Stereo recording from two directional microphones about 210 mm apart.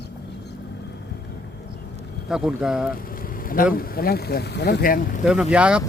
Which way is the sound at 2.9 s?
45° left (ahead or behind).